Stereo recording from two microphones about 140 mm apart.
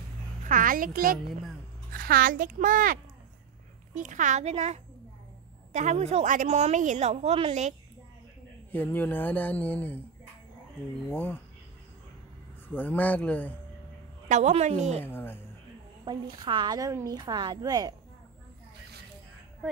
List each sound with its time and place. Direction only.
0.5 s a child's voice: 75° right (ahead or behind)
3.9 s a woman's voice: 60° right (ahead or behind)
8.7 s speech: 15° left (ahead or behind)
12.6 s speech: 15° left (ahead or behind)
14.3 s a woman's voice: 55° right (ahead or behind)
15.0 s speech: 15° left (ahead or behind)
16.1 s a woman's voice: 35° right (ahead or behind)